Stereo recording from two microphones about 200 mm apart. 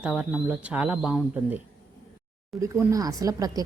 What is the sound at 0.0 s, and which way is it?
Speech, 5° right (ahead or behind).